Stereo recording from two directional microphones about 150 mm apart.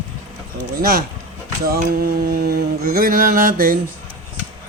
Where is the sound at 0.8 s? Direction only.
80° right.